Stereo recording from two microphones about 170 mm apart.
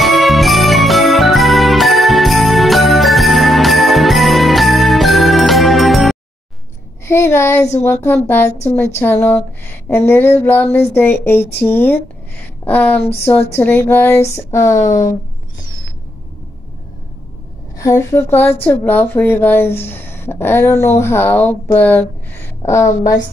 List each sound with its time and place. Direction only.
0.0 s music: centre (ahead or behind)
7.1 s a sound: 15° left (ahead or behind)
7.8 s a woman's voice: 15° left (ahead or behind)
17.7 s a woman's voice: 15° left (ahead or behind)